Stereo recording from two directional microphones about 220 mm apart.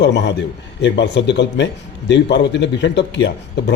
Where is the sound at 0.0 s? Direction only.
50° left (ahead or behind).